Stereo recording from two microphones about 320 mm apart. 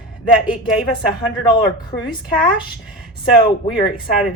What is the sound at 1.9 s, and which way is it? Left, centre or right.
Speech, left.